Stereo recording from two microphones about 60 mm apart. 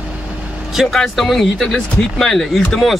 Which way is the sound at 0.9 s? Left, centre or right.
Centre.